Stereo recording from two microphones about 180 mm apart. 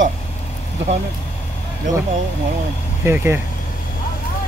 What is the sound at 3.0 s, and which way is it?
Speech, 15° right (ahead or behind).